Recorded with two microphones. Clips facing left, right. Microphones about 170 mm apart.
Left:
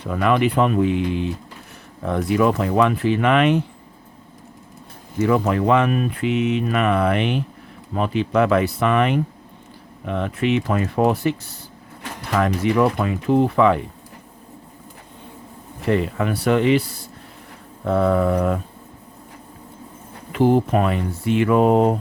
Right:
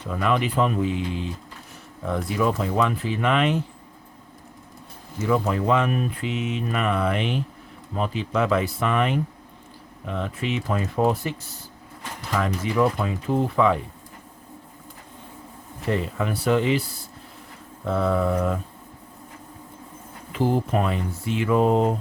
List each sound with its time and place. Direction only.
0.1 s speech: 65° left (ahead or behind)
5.2 s speech: 70° left (ahead or behind)
15.9 s speech: 65° left (ahead or behind)
17.8 s speech: 55° left (ahead or behind)
20.3 s speech: 65° left (ahead or behind)